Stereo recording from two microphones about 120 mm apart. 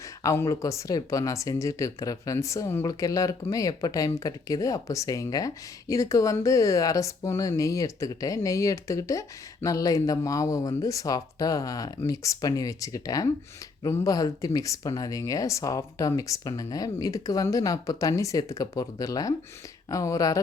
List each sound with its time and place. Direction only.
0.2 s speech: 25° left (ahead or behind)